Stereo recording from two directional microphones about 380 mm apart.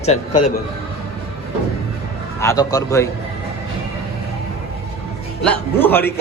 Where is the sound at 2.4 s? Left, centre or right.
Centre.